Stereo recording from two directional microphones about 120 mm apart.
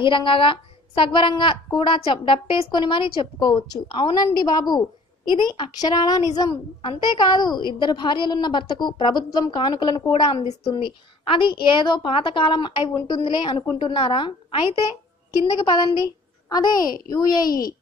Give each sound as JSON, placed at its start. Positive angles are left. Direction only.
{"t": 0.0, "sound": "a woman's voice", "side_deg": 45}
{"t": 10.4, "sound": "a woman's voice", "side_deg": 65}
{"t": 10.7, "sound": "a woman's voice", "side_deg": 40}